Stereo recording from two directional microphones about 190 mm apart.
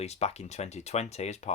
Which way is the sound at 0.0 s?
35° left (ahead or behind).